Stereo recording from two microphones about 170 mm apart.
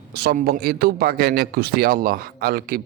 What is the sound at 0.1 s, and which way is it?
A man's voice, 70° right (ahead or behind).